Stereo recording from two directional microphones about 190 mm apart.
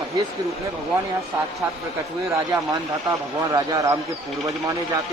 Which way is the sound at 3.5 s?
20° right (ahead or behind).